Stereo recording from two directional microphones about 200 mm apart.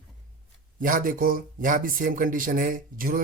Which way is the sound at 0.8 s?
40° right (ahead or behind).